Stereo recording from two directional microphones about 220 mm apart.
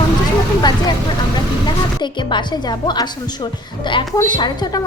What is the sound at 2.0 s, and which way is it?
Speech, 20° left (ahead or behind).